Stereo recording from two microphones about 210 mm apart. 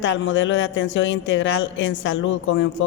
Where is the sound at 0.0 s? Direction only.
60° left (ahead or behind).